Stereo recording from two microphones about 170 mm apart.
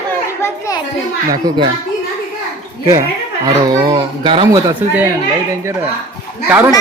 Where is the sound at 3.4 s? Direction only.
25° right (ahead or behind).